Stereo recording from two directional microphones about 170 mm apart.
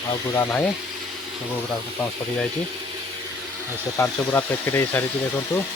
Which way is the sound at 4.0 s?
15° left (ahead or behind).